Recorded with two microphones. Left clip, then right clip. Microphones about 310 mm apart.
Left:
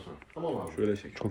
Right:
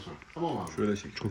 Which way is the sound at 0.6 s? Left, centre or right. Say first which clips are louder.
Left 1 dB; right.